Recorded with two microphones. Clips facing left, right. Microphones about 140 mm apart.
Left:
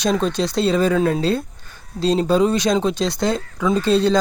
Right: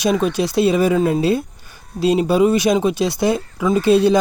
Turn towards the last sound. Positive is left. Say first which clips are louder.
# right 3 dB
turn(degrees=-10)  # may be behind; listen again after turning